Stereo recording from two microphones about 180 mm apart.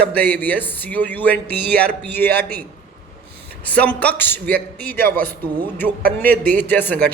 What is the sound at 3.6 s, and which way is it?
Speech, 10° left (ahead or behind).